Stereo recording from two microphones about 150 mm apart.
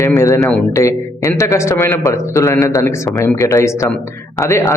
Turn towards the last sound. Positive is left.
turn(degrees=20)  # may be behind; listen again after turning